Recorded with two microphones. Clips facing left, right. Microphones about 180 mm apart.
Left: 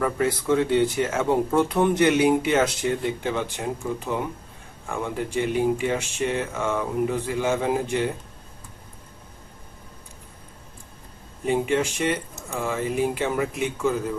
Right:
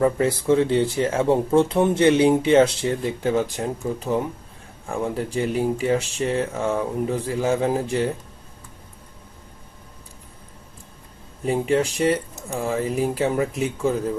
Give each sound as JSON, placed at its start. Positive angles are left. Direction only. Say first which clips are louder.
{"t": 0.0, "sound": "speech", "louder": "right 4 dB", "side_deg": -30}
{"t": 4.9, "sound": "speech", "louder": "right 3 dB", "side_deg": -35}
{"t": 11.4, "sound": "speech", "louder": "right 2 dB", "side_deg": -35}